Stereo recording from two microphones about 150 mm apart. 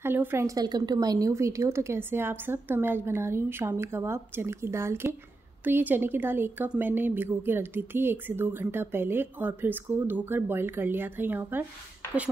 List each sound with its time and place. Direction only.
0.0 s speech: 15° right (ahead or behind)